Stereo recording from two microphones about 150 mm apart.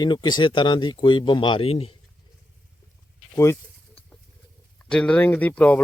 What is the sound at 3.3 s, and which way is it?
Speech, 20° left (ahead or behind).